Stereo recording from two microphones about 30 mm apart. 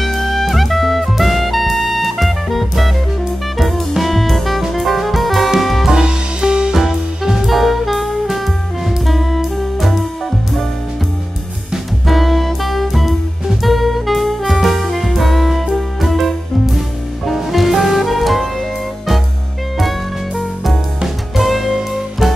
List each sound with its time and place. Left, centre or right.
0.0 s music: centre
5.9 s music: right
6.7 s music: centre
7.4 s jazz: centre
8.8 s music: centre
12.1 s music: centre
17.3 s music: centre
21.4 s music: centre